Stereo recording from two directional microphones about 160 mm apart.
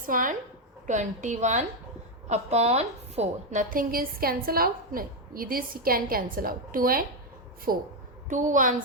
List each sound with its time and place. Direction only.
0.0 s a woman's voice: 55° right (ahead or behind)
8.3 s a woman's voice: 50° right (ahead or behind)